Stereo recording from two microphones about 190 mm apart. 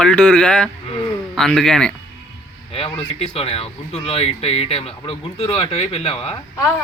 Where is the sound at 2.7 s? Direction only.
30° left (ahead or behind).